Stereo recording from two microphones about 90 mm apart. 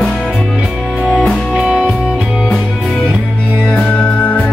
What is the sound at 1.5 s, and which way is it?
Music, 10° right (ahead or behind).